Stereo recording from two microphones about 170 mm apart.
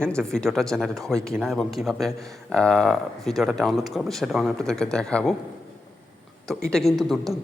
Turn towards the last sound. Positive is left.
turn(degrees=0)  # may be behind; listen again after turning